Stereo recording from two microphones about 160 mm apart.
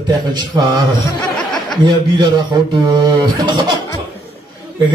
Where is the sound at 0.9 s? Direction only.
Centre (ahead or behind).